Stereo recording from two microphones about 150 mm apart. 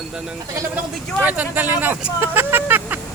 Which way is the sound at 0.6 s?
15° right (ahead or behind).